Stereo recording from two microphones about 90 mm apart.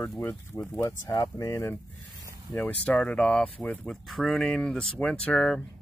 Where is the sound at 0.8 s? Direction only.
40° left (ahead or behind).